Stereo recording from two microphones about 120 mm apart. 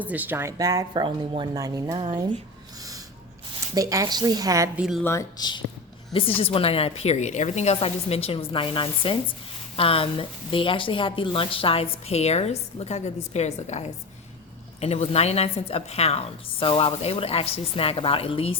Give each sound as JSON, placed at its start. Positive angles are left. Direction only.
{"t": 0.0, "sound": "speech", "side_deg": -15}
{"t": 0.5, "sound": "a woman's voice", "side_deg": -30}
{"t": 1.0, "sound": "speech", "side_deg": -40}
{"t": 1.5, "sound": "a woman's voice", "side_deg": -30}
{"t": 2.0, "sound": "speech", "side_deg": -45}
{"t": 3.8, "sound": "a woman's voice", "side_deg": -30}
{"t": 5.4, "sound": "speech", "side_deg": 40}
{"t": 6.1, "sound": "a woman's voice", "side_deg": 50}